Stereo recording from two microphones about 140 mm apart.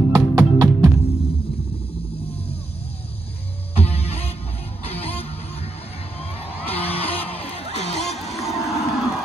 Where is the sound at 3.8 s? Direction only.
45° left (ahead or behind).